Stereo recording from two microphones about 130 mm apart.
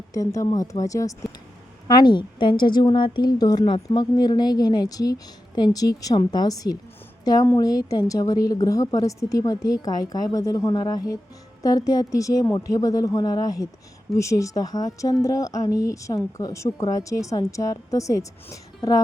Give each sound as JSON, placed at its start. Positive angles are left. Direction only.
{"t": 0.1, "sound": "a woman's voice", "side_deg": 25}